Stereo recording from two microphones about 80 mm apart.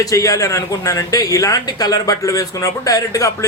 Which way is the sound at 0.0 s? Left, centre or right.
Left.